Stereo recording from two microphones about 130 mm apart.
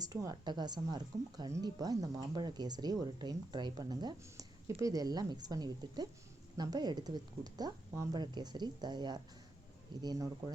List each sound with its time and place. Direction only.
0.0 s speech: 25° right (ahead or behind)